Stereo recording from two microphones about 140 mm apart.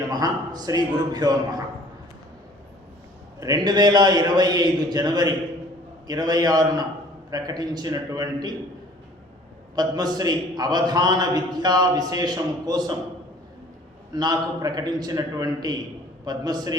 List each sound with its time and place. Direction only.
0.1 s a man's voice: 30° right (ahead or behind)
3.4 s a man's voice: 25° right (ahead or behind)
9.7 s a man's voice: 30° right (ahead or behind)
14.1 s a man's voice: 30° right (ahead or behind)